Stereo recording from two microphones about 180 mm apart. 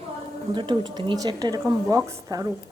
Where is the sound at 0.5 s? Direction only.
25° right (ahead or behind).